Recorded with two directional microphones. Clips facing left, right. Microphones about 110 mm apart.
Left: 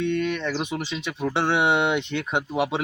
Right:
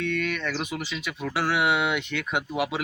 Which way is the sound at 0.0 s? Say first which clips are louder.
Left 4 dB; 20° left (ahead or behind).